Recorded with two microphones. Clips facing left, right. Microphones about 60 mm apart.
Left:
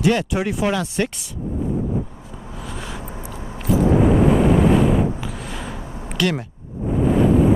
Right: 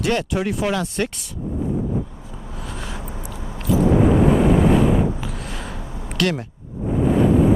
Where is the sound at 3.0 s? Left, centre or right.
Left.